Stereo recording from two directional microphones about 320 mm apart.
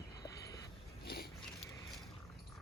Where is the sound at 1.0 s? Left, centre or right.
Left.